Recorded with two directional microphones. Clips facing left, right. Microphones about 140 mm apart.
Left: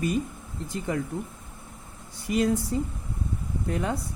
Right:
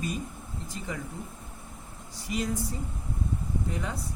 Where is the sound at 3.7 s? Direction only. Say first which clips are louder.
Left 11 dB; 60° left (ahead or behind).